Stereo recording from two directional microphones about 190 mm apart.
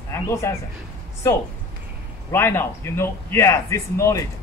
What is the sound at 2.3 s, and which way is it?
A man's voice, 15° left (ahead or behind).